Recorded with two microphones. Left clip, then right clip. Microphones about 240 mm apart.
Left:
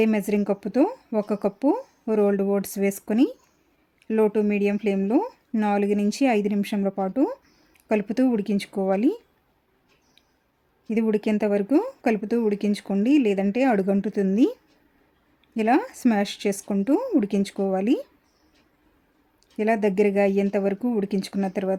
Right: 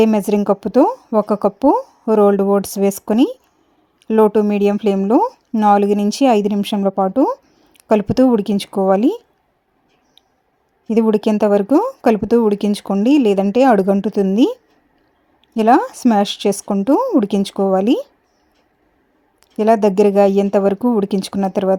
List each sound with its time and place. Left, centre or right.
0.0 s a woman's voice: right
10.8 s a woman's voice: right
15.8 s a woman's voice: centre
19.5 s a woman's voice: right